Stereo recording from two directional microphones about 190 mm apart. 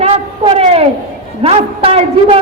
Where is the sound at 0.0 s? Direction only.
30° right (ahead or behind).